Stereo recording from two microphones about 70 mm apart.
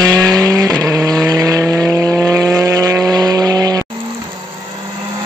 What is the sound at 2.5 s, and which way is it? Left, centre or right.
Vehicle, right.